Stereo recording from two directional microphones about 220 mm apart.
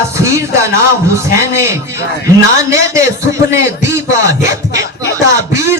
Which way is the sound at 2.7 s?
15° right (ahead or behind).